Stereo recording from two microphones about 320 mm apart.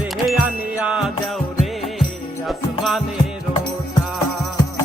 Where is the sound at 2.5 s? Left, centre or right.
Centre.